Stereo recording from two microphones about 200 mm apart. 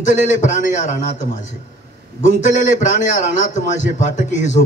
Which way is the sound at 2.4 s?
40° left (ahead or behind).